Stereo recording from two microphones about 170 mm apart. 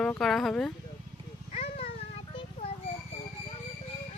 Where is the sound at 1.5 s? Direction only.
35° left (ahead or behind).